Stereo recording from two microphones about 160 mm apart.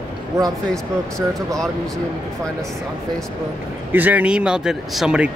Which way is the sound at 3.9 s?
10° right (ahead or behind).